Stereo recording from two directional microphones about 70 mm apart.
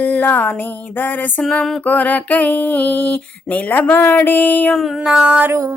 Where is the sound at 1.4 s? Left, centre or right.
Centre.